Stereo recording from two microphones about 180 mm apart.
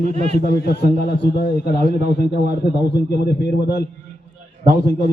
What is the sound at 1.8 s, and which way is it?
Speech, 40° right (ahead or behind).